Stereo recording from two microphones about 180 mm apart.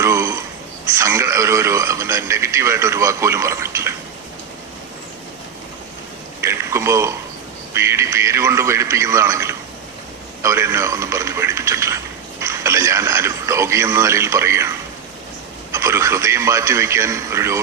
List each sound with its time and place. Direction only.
0.0 s a sound: 15° right (ahead or behind)
0.9 s speech: 15° right (ahead or behind)
6.4 s speech: 15° right (ahead or behind)
15.7 s speech: 15° right (ahead or behind)